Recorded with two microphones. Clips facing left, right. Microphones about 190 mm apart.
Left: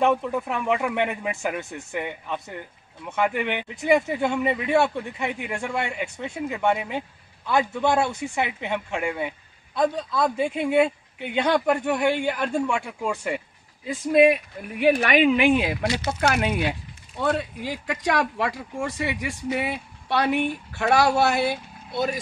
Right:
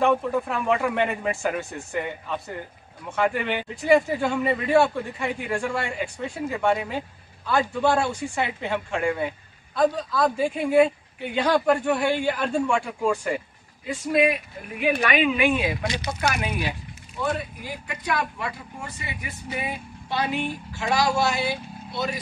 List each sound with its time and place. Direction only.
0.0 s speech: 15° left (ahead or behind)
3.2 s a man's voice: 15° left (ahead or behind)
15.0 s speech: 55° left (ahead or behind)
16.1 s speech: 50° left (ahead or behind)
17.2 s speech: 80° left; by 22.2 s 50° left (ahead or behind)